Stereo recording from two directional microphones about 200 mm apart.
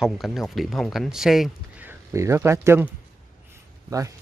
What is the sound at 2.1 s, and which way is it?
Speech, 15° right (ahead or behind).